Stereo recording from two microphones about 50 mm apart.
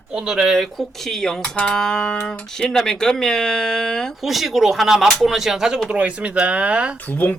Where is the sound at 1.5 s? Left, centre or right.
Left.